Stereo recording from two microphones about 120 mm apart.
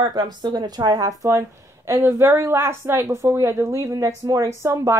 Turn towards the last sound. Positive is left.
turn(degrees=-25)  # may be behind; listen again after turning